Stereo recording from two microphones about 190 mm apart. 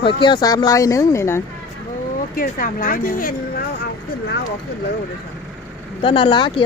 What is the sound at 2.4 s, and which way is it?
Speech, 45° left (ahead or behind).